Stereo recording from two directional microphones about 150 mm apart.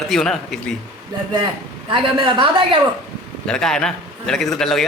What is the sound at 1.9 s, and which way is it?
Speech, 35° right (ahead or behind).